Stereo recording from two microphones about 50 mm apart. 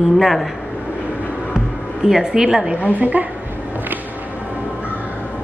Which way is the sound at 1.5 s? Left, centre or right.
Centre.